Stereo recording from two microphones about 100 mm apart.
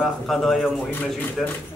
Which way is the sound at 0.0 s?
Centre (ahead or behind).